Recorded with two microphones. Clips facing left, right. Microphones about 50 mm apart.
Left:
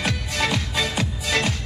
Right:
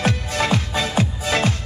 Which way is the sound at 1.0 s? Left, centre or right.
Right.